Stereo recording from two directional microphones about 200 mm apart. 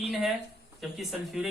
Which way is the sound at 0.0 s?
Centre (ahead or behind).